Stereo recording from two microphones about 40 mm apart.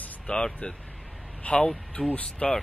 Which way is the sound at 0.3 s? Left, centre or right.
Left.